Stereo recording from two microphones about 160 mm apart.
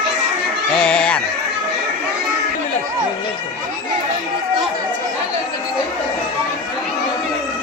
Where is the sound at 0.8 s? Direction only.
5° left (ahead or behind).